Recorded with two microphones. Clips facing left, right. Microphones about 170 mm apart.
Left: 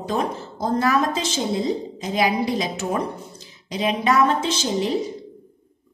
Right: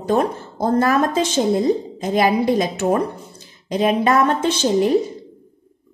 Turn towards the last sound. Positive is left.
turn(degrees=-50)  # may be behind; listen again after turning